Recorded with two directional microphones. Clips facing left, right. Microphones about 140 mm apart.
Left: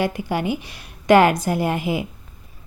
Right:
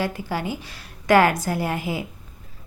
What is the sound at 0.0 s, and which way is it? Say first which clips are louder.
A woman's voice: left 4 dB; 20° left (ahead or behind).